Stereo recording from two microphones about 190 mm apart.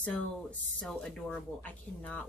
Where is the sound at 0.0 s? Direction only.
5° left (ahead or behind).